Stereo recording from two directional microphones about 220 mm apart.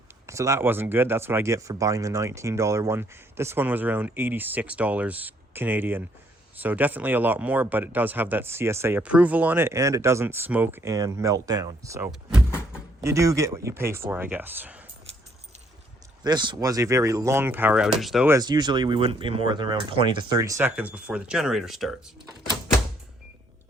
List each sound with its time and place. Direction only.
0.3 s speech: 15° right (ahead or behind)
16.2 s speech: 20° right (ahead or behind); by 18.3 s centre (ahead or behind)
18.3 s speech: 15° right (ahead or behind); by 21.9 s centre (ahead or behind)